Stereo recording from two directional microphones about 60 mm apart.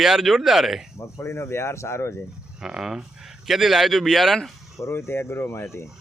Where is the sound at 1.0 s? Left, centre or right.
Left.